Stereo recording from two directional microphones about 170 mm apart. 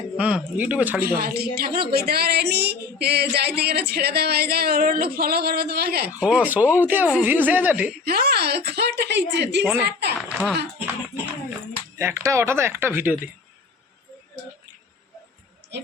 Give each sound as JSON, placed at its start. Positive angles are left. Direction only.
{"t": 0.2, "sound": "speech", "side_deg": -5}
{"t": 1.0, "sound": "speech", "side_deg": -60}
{"t": 6.1, "sound": "speech", "side_deg": -10}
{"t": 8.0, "sound": "speech", "side_deg": -65}
{"t": 9.7, "sound": "speech", "side_deg": -75}
{"t": 10.2, "sound": "a sound", "side_deg": -5}
{"t": 11.9, "sound": "speech", "side_deg": -15}